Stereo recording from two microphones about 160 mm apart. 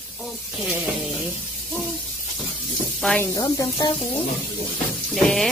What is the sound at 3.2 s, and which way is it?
Speech, 20° left (ahead or behind).